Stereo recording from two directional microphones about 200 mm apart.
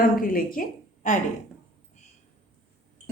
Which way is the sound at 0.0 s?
45° left (ahead or behind).